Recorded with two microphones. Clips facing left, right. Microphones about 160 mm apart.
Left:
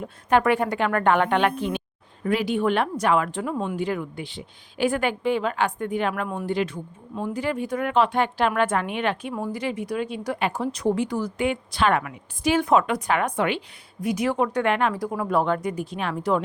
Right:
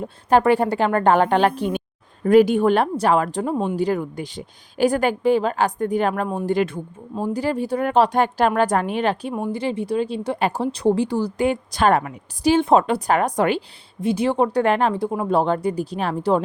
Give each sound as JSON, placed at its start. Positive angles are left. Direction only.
{"t": 0.0, "sound": "speech", "side_deg": -35}
{"t": 7.2, "sound": "speech", "side_deg": -35}
{"t": 9.3, "sound": "speech", "side_deg": -25}
{"t": 14.0, "sound": "speech", "side_deg": -30}